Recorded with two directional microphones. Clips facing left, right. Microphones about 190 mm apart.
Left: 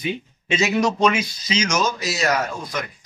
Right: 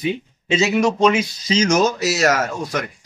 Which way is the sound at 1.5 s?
50° right (ahead or behind).